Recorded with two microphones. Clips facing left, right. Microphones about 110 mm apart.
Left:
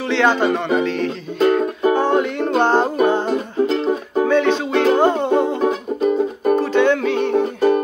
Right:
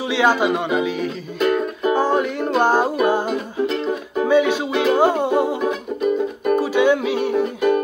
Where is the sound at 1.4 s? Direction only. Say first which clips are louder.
Left 3 dB; 35° left (ahead or behind).